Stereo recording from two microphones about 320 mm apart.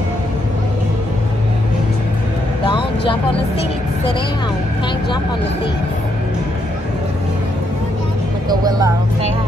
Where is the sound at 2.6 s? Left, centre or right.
Centre.